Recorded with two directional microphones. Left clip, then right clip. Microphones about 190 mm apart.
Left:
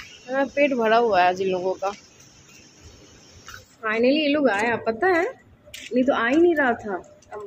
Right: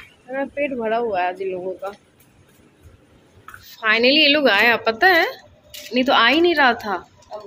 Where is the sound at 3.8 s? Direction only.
5° left (ahead or behind).